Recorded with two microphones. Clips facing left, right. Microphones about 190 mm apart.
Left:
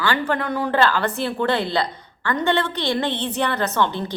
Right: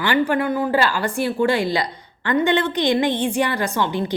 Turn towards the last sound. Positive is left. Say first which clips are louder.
# right 1 dB
turn(degrees=-10)  # may be behind; listen again after turning